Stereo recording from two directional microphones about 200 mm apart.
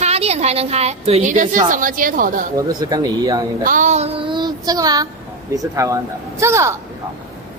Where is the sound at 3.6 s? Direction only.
40° right (ahead or behind); by 6.8 s 15° right (ahead or behind).